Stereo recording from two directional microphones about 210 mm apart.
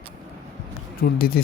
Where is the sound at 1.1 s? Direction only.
45° left (ahead or behind).